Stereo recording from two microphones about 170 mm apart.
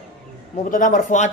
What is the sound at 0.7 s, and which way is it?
Speech, 50° left (ahead or behind).